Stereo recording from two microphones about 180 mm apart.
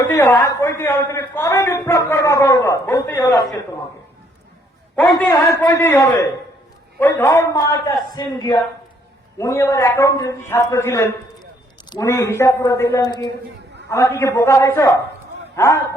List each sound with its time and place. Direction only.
0.0 s a man's voice: 15° left (ahead or behind)
5.3 s a man's voice: 15° left (ahead or behind)